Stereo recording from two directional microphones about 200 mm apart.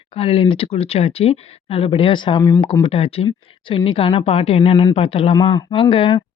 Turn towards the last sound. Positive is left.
turn(degrees=25)  # may be behind; listen again after turning